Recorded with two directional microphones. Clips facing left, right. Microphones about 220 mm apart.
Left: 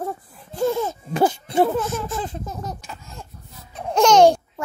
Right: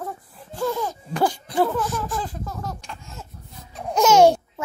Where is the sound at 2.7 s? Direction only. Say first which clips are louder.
Even; 5° left (ahead or behind).